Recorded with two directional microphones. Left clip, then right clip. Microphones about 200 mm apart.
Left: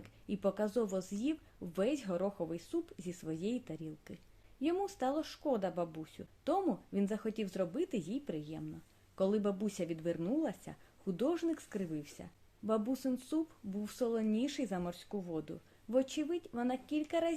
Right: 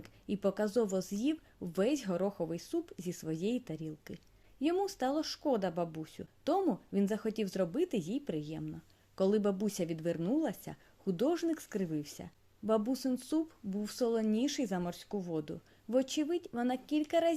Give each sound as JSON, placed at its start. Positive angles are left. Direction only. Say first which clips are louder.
{"t": 0.0, "sound": "speech", "louder": "right 2 dB", "side_deg": -35}